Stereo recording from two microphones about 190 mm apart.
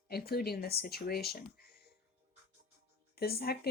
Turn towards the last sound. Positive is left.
turn(degrees=55)  # may be behind; listen again after turning